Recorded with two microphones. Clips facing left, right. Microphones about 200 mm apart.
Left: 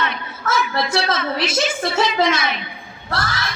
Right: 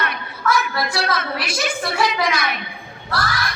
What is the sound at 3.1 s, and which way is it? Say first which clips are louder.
Crowd: right 1 dB; 25° left (ahead or behind).